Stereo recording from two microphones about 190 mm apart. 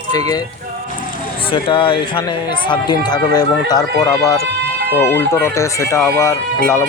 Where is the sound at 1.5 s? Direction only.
25° left (ahead or behind).